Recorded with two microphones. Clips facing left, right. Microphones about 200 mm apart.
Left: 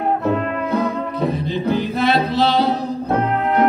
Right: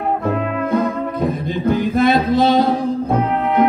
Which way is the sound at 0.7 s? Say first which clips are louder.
Right 3 dB; 50° right (ahead or behind).